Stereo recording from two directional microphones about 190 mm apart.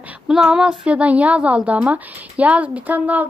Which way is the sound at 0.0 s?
5° right (ahead or behind).